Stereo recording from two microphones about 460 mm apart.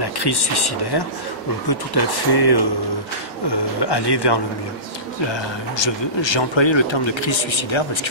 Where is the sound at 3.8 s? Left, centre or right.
Left.